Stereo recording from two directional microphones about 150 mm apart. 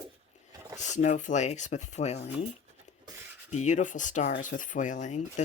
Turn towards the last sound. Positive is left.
turn(degrees=55)  # may be behind; listen again after turning